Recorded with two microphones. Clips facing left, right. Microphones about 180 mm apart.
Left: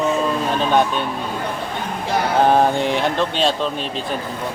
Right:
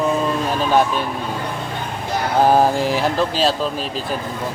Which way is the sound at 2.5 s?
5° right (ahead or behind).